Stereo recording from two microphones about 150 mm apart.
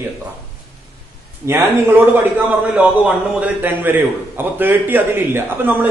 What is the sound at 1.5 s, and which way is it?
A man's voice, 10° right (ahead or behind).